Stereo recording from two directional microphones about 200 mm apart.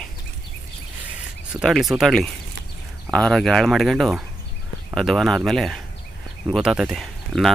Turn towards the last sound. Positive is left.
turn(degrees=0)  # may be behind; listen again after turning